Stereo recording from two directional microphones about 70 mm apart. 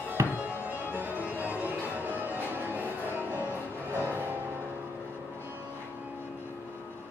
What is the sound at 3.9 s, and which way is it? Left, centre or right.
Music, right.